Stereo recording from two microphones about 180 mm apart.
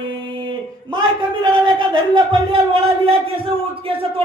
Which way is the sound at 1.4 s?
25° right (ahead or behind).